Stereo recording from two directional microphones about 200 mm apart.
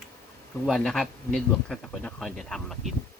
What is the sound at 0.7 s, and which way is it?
Speech, centre (ahead or behind).